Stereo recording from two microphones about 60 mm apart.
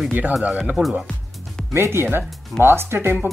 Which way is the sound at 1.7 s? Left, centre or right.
Right.